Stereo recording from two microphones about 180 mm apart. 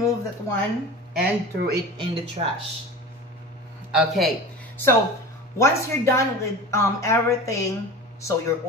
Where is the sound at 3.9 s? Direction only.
Centre (ahead or behind).